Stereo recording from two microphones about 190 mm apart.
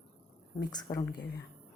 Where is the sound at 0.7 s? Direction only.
20° left (ahead or behind).